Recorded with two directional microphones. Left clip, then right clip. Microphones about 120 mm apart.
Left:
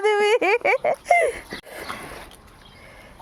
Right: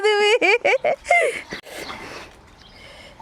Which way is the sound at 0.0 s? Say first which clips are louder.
Right 2 dB; 20° right (ahead or behind).